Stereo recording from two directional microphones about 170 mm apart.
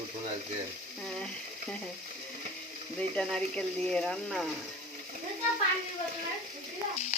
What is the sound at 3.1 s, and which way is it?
Speech, 5° left (ahead or behind).